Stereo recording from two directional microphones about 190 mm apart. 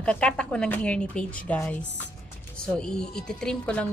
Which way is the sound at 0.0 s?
5° left (ahead or behind).